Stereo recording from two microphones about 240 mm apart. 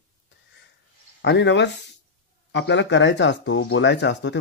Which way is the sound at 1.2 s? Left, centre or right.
Left.